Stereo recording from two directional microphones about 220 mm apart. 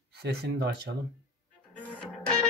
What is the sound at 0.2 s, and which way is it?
Speech, 45° right (ahead or behind).